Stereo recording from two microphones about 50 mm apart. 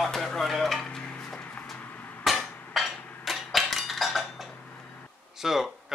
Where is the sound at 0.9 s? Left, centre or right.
Centre.